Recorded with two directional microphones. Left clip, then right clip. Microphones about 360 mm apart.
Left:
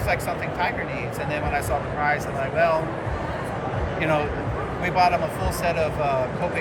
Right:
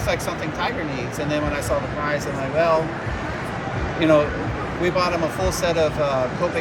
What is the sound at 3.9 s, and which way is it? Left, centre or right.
Speech, centre.